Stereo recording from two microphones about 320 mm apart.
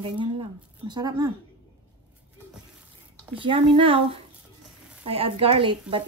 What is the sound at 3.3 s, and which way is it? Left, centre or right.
Speech, centre.